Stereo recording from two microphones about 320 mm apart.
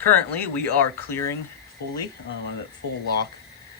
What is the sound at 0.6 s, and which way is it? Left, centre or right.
Speech, right.